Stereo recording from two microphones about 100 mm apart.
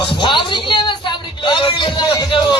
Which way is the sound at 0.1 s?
55° left (ahead or behind).